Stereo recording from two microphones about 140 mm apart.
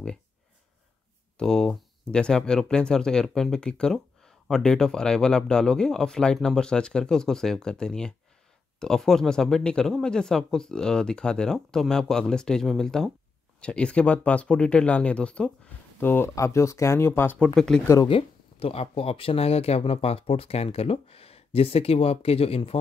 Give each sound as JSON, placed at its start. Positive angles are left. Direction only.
{"t": 1.4, "sound": "speech", "side_deg": 5}
{"t": 17.6, "sound": "speech", "side_deg": 5}
{"t": 18.0, "sound": "speech", "side_deg": 40}